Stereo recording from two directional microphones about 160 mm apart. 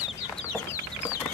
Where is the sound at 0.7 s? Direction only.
20° left (ahead or behind).